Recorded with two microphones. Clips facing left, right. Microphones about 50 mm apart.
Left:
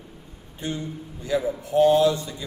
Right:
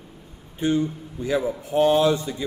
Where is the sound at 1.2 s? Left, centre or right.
Right.